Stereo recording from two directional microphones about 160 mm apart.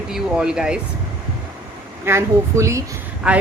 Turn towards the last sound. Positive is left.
turn(degrees=-5)  # may be behind; listen again after turning